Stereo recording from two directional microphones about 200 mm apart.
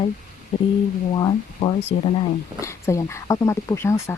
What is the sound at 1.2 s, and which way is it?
Speech, 25° left (ahead or behind).